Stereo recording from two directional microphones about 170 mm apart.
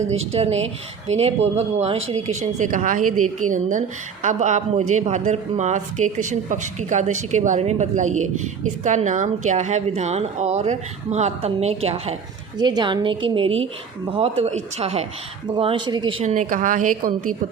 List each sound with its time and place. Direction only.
0.1 s a woman's voice: 40° right (ahead or behind)
12.5 s a woman's voice: 25° right (ahead or behind)
15.4 s a woman's voice: 30° right (ahead or behind)
16.2 s a woman's voice: 45° right (ahead or behind)